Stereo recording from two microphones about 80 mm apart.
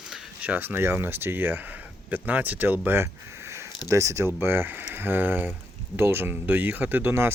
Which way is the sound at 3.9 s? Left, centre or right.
Right.